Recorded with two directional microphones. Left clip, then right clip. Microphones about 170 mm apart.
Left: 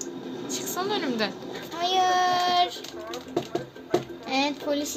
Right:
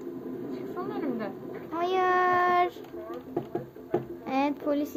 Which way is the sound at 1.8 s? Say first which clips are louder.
Left 2 dB; 15° right (ahead or behind).